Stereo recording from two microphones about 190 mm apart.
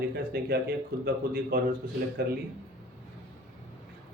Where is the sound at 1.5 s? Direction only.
50° right (ahead or behind).